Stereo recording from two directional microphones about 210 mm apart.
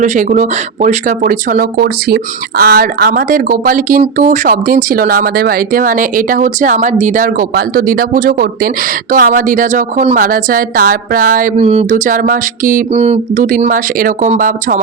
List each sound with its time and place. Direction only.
0.0 s a woman's voice: 35° right (ahead or behind)